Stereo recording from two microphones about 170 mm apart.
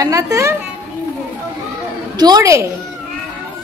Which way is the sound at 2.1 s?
25° right (ahead or behind).